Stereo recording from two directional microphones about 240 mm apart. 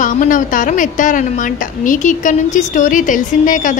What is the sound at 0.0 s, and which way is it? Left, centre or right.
A woman's voice, left.